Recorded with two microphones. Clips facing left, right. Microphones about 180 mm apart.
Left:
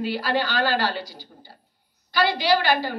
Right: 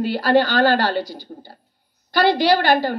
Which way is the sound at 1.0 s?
10° left (ahead or behind).